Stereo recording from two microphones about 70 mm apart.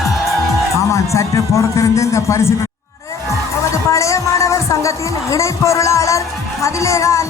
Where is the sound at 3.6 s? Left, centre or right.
Left.